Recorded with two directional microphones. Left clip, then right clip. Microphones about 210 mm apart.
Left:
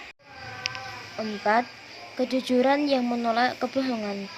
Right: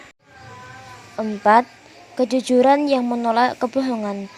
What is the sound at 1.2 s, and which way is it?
Speech, 35° right (ahead or behind).